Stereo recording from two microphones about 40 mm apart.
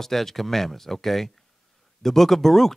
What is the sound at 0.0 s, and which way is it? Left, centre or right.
Speech, centre.